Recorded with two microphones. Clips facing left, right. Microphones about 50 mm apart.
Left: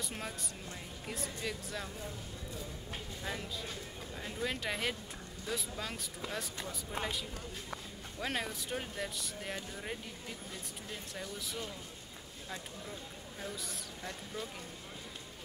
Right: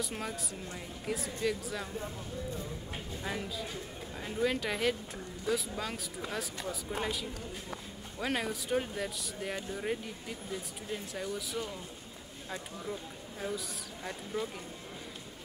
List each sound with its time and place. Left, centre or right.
0.0 s speech: centre
4.2 s speech: centre
10.9 s speech: centre
14.0 s speech: centre